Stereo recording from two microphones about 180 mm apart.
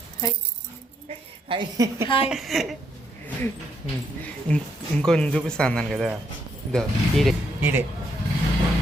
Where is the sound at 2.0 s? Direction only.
30° left (ahead or behind).